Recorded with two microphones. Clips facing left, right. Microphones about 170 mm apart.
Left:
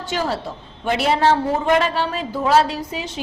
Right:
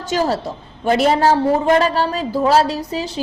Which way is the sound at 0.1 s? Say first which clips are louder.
Right 5 dB; 40° right (ahead or behind).